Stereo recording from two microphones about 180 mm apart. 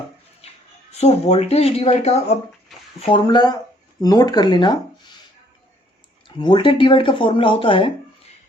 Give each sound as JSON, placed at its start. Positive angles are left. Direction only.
{"t": 0.9, "sound": "speech", "side_deg": 35}
{"t": 6.2, "sound": "speech", "side_deg": 25}